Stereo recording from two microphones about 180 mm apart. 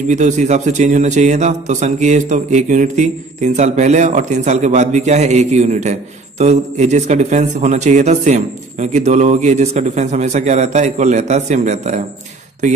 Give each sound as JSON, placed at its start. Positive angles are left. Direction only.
{"t": 0.1, "sound": "speech", "side_deg": -40}